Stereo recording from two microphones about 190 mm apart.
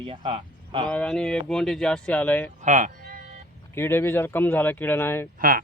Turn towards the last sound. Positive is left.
turn(degrees=-50)  # may be behind; listen again after turning